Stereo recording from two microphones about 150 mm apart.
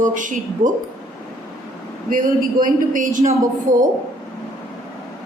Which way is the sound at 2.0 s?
65° right (ahead or behind).